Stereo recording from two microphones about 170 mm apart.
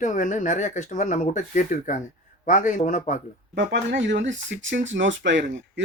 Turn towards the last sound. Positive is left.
turn(degrees=-90)